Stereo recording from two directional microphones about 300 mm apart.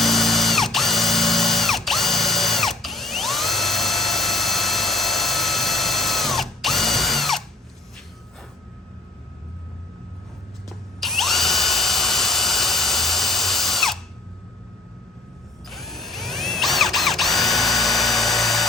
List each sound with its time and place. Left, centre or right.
0.0 s ratchet: centre
10.7 s drill: centre
15.7 s drill: centre